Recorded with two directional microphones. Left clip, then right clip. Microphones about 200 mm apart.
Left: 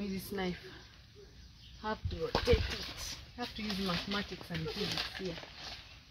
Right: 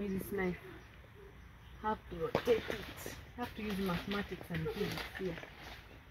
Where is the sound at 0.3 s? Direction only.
10° left (ahead or behind).